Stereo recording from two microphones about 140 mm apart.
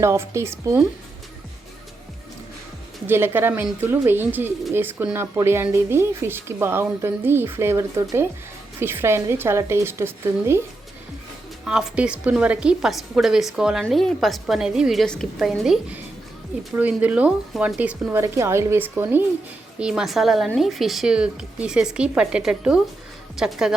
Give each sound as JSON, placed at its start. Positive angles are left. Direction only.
{"t": 0.0, "sound": "speech", "side_deg": -20}
{"t": 3.1, "sound": "speech", "side_deg": -15}
{"t": 11.6, "sound": "a woman's voice", "side_deg": -5}
{"t": 19.8, "sound": "a woman's voice", "side_deg": -5}